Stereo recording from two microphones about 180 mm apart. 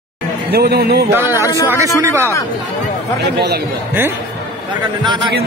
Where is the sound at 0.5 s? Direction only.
60° right (ahead or behind).